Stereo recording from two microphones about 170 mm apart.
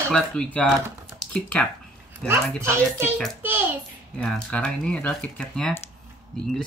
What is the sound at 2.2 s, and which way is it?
Speech, 5° left (ahead or behind).